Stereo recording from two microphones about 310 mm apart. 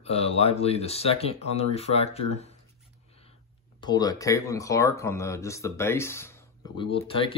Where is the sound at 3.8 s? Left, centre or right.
Centre.